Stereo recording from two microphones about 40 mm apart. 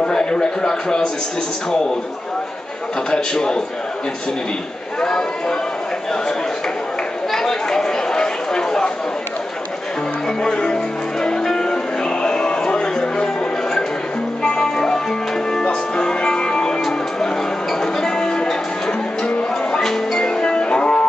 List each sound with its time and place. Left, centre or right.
0.0 s speech: centre
3.1 s speech: centre
5.0 s speech: centre
7.2 s a sound: centre
10.4 s music: left
14.4 s music: centre
18.0 s music: centre